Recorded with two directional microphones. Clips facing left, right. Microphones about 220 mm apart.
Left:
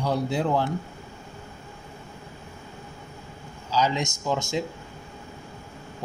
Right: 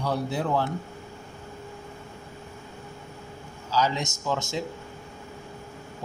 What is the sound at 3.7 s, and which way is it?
Speech, 15° left (ahead or behind).